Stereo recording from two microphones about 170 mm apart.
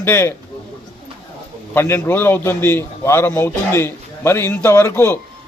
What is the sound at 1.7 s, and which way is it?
A man's voice, 15° left (ahead or behind).